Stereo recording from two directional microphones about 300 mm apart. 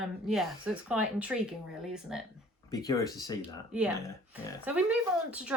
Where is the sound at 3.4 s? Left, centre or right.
Centre.